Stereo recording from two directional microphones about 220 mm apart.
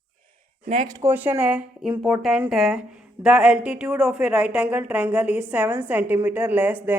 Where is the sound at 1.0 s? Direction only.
10° right (ahead or behind).